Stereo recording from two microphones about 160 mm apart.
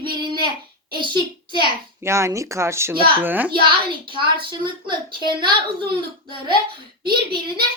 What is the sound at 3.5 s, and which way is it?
A child's voice, 30° right (ahead or behind).